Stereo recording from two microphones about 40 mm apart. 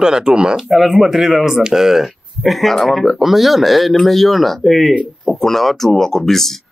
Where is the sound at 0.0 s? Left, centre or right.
Centre.